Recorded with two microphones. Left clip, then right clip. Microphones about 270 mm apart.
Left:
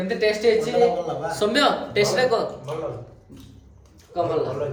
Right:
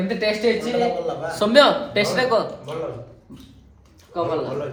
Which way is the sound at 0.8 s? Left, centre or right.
Centre.